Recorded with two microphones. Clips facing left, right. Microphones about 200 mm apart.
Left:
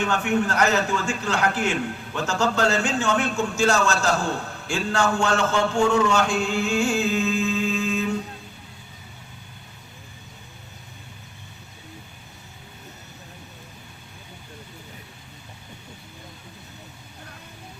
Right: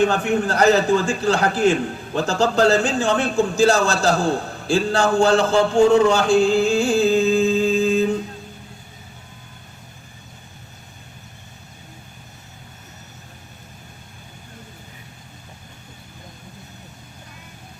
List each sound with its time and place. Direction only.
0.0 s a man's voice: 35° right (ahead or behind)
4.9 s chant: 35° right (ahead or behind)